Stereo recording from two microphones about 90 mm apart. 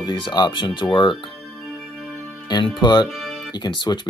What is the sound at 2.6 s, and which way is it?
Speech, 55° left (ahead or behind).